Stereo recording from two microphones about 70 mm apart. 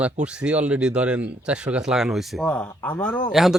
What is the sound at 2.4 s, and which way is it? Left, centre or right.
Speech, centre.